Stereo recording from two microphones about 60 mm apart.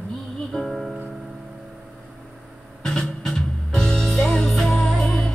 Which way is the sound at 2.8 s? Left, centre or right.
Centre.